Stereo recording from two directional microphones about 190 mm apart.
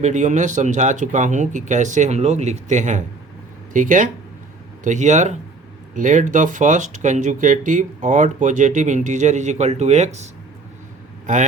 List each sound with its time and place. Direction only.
0.0 s speech: 40° right (ahead or behind)
11.3 s speech: 40° right (ahead or behind)